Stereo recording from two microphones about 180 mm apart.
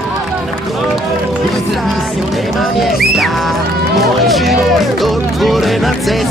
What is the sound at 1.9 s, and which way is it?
Music, centre (ahead or behind).